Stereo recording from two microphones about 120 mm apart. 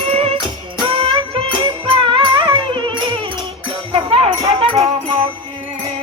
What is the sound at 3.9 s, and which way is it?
Music, 55° right (ahead or behind).